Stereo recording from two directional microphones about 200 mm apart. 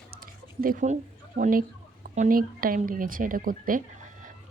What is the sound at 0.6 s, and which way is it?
Speech, 45° right (ahead or behind).